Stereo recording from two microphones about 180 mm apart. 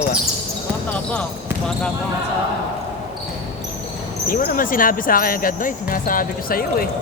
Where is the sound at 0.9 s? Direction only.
5° left (ahead or behind).